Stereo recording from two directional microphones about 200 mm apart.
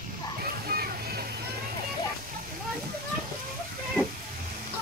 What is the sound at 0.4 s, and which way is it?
Music, 50° right (ahead or behind).